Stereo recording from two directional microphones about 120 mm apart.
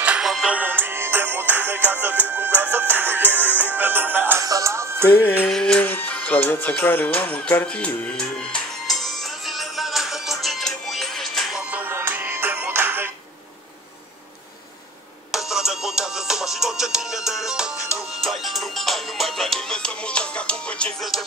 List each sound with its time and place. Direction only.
0.0 s music: 10° right (ahead or behind)
4.4 s music: 25° right (ahead or behind)
5.1 s music: 15° left (ahead or behind)
5.5 s music: 5° left (ahead or behind)
11.7 s music: 20° right (ahead or behind)
15.3 s music: 5° right (ahead or behind)